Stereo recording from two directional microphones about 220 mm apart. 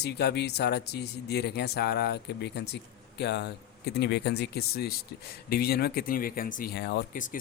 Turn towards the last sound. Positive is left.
turn(degrees=45)  # may be behind; listen again after turning